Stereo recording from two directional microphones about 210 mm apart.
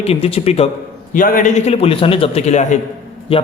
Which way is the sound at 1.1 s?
40° left (ahead or behind).